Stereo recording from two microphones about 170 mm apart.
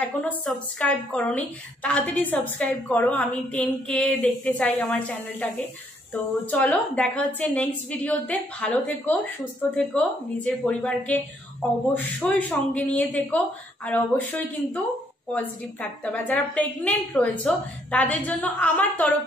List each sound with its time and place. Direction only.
0.0 s a woman's voice: 10° left (ahead or behind)